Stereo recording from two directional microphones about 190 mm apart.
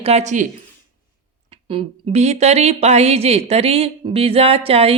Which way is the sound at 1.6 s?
30° right (ahead or behind).